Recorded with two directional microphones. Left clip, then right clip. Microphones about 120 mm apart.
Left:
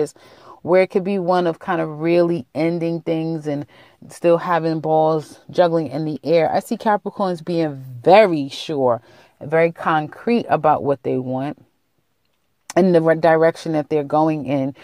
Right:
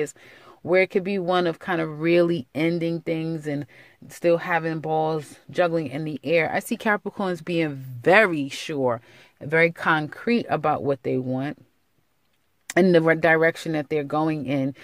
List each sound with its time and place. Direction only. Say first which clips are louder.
0.7 s speech: left 5 dB; 5° right (ahead or behind)
1.6 s speech: left 4 dB; 25° right (ahead or behind); by 4.5 s centre (ahead or behind)
4.5 s speech: left 6 dB; 15° left (ahead or behind); by 8.1 s 10° right (ahead or behind)
8.1 s speech: left 6 dB; 5° left (ahead or behind)
8.9 s speech: left 7 dB; 15° right (ahead or behind)
12.8 s speech: left 3 dB; 25° right (ahead or behind)
13.2 s speech: left 4 dB; 10° right (ahead or behind)